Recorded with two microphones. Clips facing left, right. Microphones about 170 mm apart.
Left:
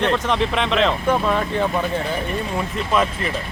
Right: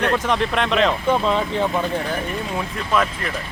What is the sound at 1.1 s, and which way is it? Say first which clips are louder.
Speech: even; 15° right (ahead or behind).